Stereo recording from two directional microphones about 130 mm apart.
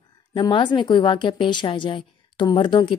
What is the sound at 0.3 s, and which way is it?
A woman's voice, 35° left (ahead or behind).